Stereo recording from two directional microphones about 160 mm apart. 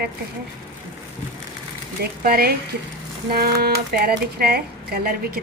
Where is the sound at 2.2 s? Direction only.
70° right (ahead or behind).